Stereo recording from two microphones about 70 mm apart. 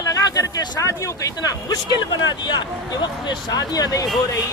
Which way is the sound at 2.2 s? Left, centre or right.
Left.